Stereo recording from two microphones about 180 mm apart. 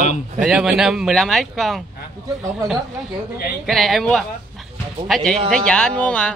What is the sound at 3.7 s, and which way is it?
Speech, centre (ahead or behind).